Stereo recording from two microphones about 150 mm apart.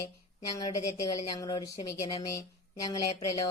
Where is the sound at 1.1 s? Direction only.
25° left (ahead or behind).